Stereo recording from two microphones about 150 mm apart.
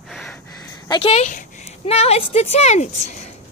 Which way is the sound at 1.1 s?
50° left (ahead or behind).